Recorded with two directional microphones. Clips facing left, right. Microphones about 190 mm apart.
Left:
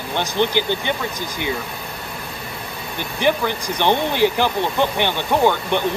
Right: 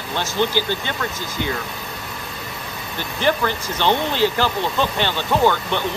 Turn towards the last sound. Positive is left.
turn(degrees=15)  # may be behind; listen again after turning